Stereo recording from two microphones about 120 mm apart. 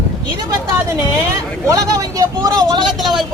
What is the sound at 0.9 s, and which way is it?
Speech, 25° right (ahead or behind).